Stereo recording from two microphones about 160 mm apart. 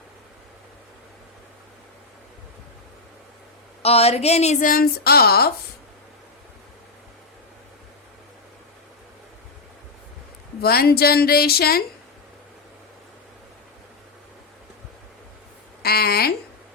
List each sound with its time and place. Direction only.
3.8 s speech: 40° left (ahead or behind); by 5.5 s 75° left (ahead or behind)
10.6 s a woman's voice: 75° left (ahead or behind)
15.8 s a sound: 75° left (ahead or behind)